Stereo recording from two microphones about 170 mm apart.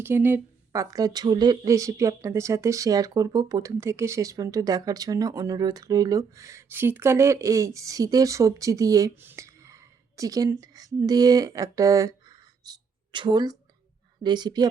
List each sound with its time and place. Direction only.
0.0 s a woman's voice: 15° right (ahead or behind)